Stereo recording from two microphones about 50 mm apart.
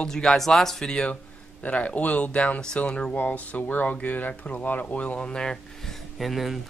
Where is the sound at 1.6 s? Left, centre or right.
Left.